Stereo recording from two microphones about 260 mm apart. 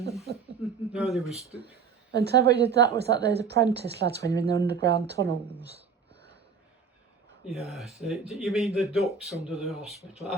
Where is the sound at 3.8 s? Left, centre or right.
Right.